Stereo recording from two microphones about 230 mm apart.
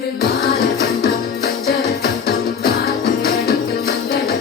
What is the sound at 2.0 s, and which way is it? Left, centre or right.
Music, left.